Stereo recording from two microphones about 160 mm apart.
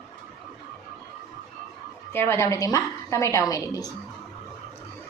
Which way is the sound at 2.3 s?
20° left (ahead or behind).